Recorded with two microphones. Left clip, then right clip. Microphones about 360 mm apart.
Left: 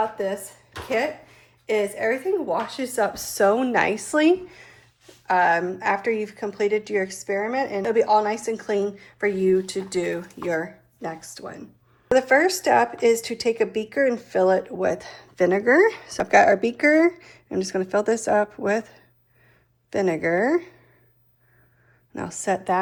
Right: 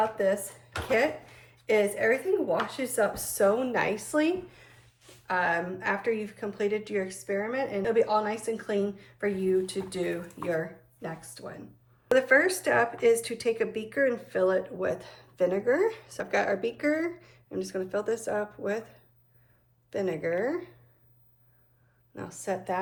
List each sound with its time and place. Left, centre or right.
0.0 s a sound: centre
1.6 s speech: centre
22.1 s speech: left